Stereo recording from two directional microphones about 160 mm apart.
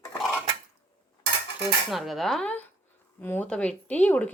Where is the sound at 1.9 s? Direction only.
Centre (ahead or behind).